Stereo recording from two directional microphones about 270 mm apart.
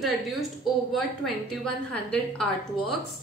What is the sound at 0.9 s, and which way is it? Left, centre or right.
A woman's voice, centre.